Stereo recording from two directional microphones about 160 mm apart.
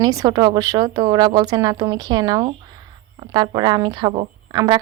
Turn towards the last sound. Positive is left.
turn(degrees=-25)  # may be behind; listen again after turning